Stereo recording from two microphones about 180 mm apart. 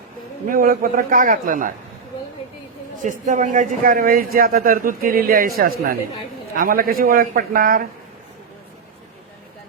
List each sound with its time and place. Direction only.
0.4 s speech: 50° right (ahead or behind)
3.0 s speech: 45° right (ahead or behind)